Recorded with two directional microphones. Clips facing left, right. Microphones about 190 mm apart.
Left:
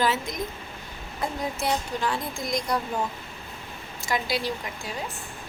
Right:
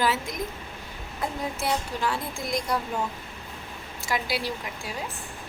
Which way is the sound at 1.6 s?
5° right (ahead or behind).